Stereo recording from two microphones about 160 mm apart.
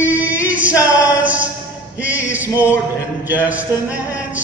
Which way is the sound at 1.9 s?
10° right (ahead or behind).